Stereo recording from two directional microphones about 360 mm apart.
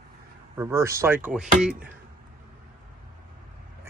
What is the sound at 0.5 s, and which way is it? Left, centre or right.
Speech, centre.